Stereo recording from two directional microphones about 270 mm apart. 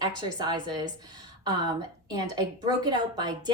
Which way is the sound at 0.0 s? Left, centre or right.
Centre.